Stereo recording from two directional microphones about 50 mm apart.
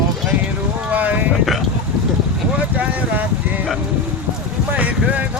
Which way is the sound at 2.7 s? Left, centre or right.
Right.